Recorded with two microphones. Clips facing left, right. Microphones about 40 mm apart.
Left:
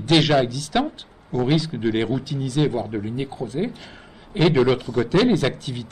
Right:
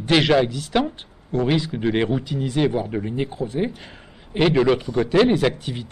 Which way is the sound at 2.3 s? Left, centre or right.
Right.